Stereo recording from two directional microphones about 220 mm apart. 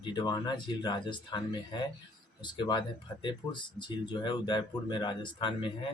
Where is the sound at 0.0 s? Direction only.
20° left (ahead or behind).